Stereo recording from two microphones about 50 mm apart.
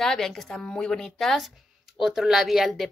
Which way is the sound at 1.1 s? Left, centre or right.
Centre.